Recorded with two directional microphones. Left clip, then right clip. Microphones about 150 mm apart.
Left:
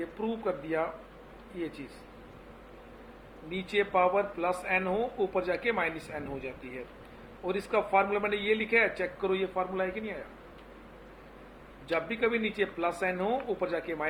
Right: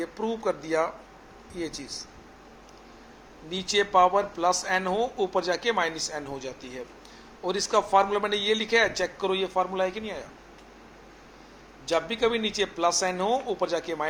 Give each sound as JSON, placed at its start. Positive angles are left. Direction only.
{"t": 0.2, "sound": "speech", "side_deg": -25}
{"t": 3.5, "sound": "speech", "side_deg": -25}
{"t": 7.4, "sound": "speech", "side_deg": -25}
{"t": 11.9, "sound": "speech", "side_deg": -30}